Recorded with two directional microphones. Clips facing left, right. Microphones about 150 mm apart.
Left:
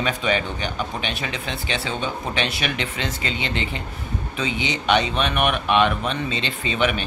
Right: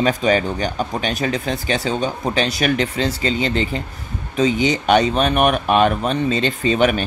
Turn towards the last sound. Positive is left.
turn(degrees=-40)  # may be behind; listen again after turning